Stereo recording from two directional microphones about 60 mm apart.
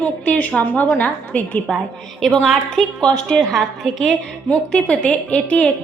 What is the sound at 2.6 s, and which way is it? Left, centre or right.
A woman's voice, centre.